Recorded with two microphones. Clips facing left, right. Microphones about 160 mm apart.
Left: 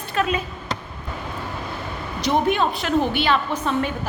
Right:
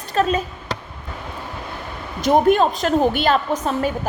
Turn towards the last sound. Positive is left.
turn(degrees=-40)  # may be behind; listen again after turning